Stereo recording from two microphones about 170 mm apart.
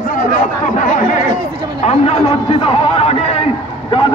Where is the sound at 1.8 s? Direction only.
40° left (ahead or behind).